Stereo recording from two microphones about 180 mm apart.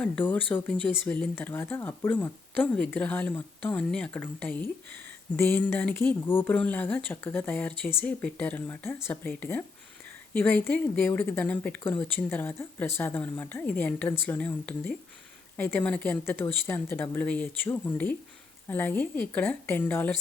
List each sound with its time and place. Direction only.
0.0 s speech: 10° left (ahead or behind)